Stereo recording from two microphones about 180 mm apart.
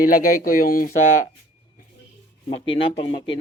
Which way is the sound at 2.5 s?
30° left (ahead or behind).